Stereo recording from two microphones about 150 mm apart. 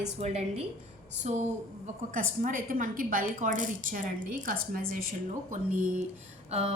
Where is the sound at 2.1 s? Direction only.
60° right (ahead or behind).